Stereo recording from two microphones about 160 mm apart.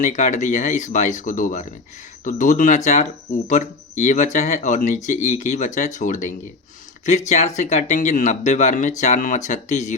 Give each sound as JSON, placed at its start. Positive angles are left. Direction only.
{"t": 0.0, "sound": "speech", "side_deg": 50}